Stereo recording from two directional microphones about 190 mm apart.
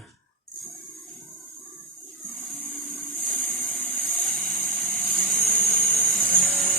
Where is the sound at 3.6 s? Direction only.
10° left (ahead or behind).